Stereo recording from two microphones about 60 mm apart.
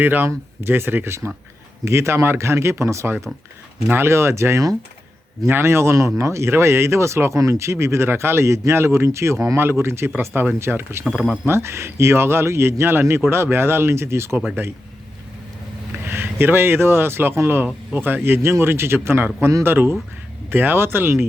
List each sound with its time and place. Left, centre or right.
0.0 s speech: right
3.8 s speech: right
11.1 s speech: centre
11.4 s speech: right
16.0 s speech: right